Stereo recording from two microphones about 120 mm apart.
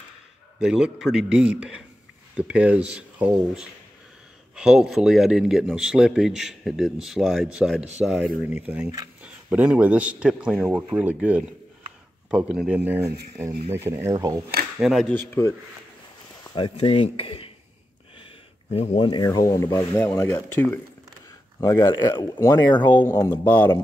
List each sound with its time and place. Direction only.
0.6 s a man's voice: 5° right (ahead or behind); by 14.4 s 25° right (ahead or behind)
14.8 s speech: centre (ahead or behind)
15.1 s speech: 20° left (ahead or behind)
16.5 s speech: 50° left (ahead or behind)
18.2 s a sound: 55° left (ahead or behind)
19.0 s speech: 35° left (ahead or behind); by 23.7 s 15° left (ahead or behind)